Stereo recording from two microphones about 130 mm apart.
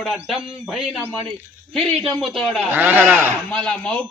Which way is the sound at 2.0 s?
Centre (ahead or behind).